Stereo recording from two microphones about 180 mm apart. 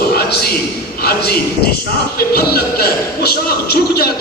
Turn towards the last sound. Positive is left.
turn(degrees=60)  # may be behind; listen again after turning